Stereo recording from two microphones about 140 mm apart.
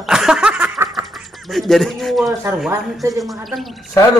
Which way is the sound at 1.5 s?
Centre (ahead or behind).